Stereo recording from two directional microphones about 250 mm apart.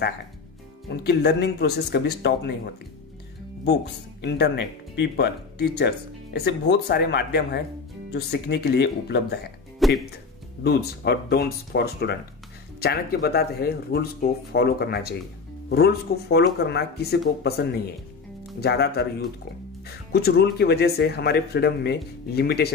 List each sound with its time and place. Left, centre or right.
0.8 s speech: left
4.2 s speech: left
9.8 s speech: centre
10.6 s speech: left